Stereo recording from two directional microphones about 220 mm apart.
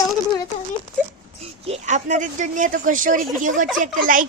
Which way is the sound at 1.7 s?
35° right (ahead or behind).